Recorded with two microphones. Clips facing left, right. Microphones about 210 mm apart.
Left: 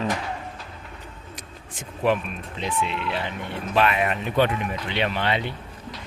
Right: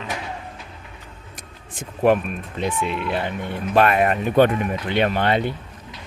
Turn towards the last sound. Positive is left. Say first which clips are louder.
# right 5 dB
turn(degrees=-45)  # may be behind; listen again after turning